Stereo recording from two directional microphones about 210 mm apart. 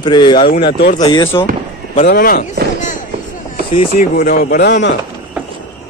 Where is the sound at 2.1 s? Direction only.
45° left (ahead or behind).